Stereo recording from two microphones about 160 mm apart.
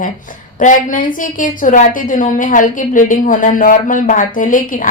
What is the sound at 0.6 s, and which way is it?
A woman's voice, 55° left (ahead or behind).